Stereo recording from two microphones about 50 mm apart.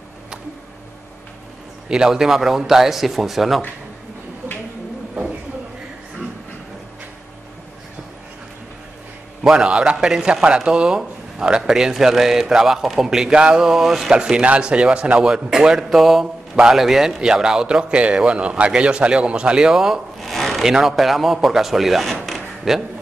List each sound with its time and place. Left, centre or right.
1.9 s a man's voice: centre
9.5 s a man's voice: centre
13.7 s a man's voice: centre
14.4 s a man's voice: right
20.2 s a sound: centre
20.6 s speech: centre